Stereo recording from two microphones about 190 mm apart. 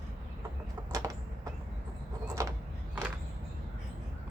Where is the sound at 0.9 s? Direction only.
15° right (ahead or behind).